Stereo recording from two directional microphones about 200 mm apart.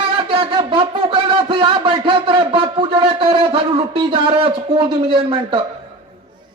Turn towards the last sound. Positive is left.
turn(degrees=-25)  # may be behind; listen again after turning